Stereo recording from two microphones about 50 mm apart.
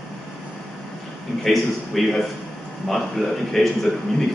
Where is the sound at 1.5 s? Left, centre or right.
Centre.